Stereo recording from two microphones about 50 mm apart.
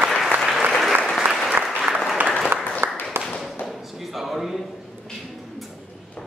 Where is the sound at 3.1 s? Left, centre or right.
Right.